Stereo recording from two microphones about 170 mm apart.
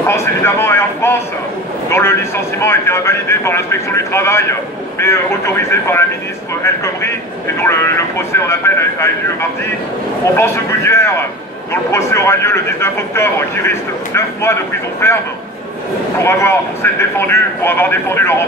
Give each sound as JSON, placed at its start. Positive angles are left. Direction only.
{"t": 0.0, "sound": "a man's voice", "side_deg": 15}
{"t": 16.2, "sound": "a man's voice", "side_deg": 15}